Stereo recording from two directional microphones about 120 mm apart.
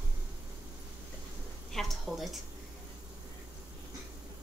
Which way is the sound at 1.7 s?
Centre (ahead or behind).